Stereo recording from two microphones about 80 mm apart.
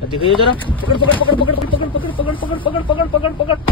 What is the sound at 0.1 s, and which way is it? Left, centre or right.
Speech, left.